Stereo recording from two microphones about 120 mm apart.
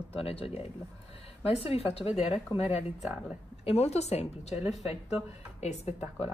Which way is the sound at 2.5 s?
40° left (ahead or behind).